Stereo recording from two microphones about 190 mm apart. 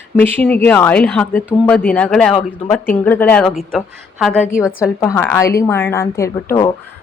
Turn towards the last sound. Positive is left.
turn(degrees=15)  # may be behind; listen again after turning